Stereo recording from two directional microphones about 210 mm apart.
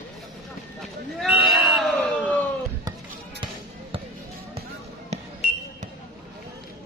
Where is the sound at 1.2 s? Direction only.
Centre (ahead or behind).